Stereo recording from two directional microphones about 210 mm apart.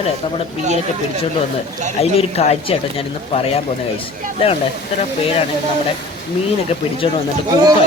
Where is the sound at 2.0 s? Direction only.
30° left (ahead or behind).